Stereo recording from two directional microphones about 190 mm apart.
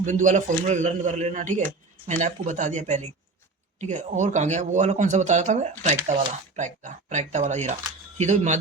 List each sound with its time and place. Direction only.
0.0 s a man's voice: 40° right (ahead or behind)